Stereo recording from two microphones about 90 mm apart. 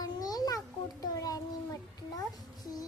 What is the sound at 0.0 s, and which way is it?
Babbling, 45° left (ahead or behind).